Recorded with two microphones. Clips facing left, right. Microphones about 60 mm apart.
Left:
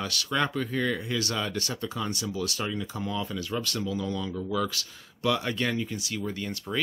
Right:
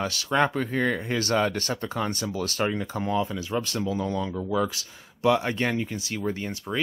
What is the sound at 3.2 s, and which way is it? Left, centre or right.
Speech, right.